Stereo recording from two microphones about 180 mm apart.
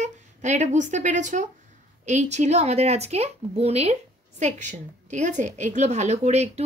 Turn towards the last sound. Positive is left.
turn(degrees=-35)  # may be behind; listen again after turning